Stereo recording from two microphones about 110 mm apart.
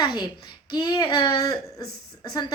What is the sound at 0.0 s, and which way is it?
A child's voice, 45° left (ahead or behind).